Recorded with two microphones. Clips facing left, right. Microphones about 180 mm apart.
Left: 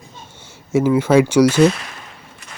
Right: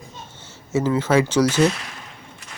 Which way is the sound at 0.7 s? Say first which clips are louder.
Left 5 dB; 10° left (ahead or behind).